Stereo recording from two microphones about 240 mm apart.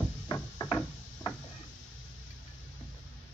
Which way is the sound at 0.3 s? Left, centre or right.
Centre.